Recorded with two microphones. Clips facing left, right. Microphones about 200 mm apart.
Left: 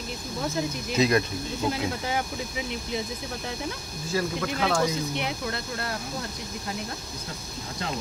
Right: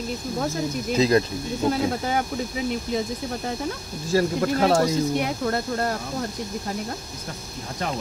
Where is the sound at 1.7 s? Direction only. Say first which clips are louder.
Right 6 dB; 45° right (ahead or behind).